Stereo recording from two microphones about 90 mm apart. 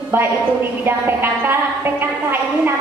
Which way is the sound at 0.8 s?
25° right (ahead or behind).